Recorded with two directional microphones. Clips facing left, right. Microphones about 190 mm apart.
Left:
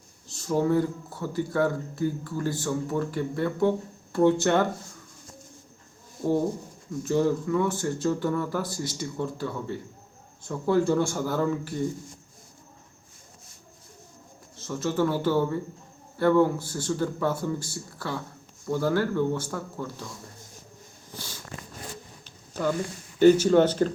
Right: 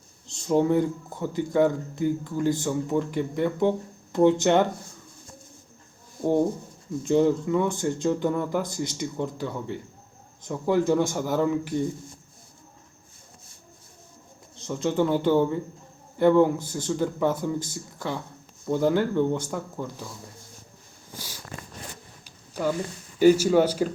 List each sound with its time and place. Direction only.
0.3 s speech: 20° right (ahead or behind)
7.0 s speech: 20° right (ahead or behind)
14.5 s speech: 20° right (ahead or behind)
23.1 s speech: 10° right (ahead or behind)